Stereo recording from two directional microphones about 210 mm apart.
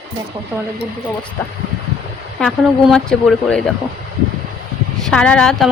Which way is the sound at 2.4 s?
Centre (ahead or behind).